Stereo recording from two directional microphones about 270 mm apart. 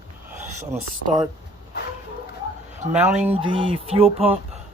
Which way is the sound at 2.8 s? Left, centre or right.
Right.